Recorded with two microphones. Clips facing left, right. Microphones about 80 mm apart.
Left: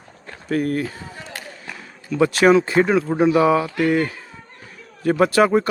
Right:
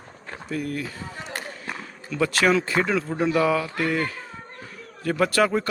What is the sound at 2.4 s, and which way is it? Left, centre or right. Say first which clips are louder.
A man's voice: left 7 dB; left.